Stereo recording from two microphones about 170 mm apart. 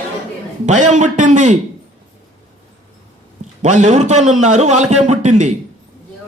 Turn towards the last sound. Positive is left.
turn(degrees=-45)  # may be behind; listen again after turning